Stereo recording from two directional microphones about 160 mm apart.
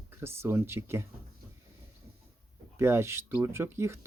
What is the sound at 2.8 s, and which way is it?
Speech, 15° right (ahead or behind).